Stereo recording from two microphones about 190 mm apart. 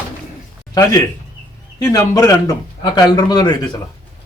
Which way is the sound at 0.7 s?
20° left (ahead or behind).